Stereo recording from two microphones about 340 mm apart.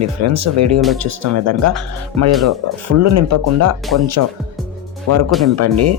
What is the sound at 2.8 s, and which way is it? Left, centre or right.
Speech, right.